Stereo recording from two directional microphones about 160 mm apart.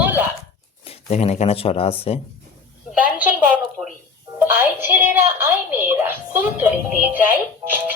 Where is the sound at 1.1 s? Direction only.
40° left (ahead or behind).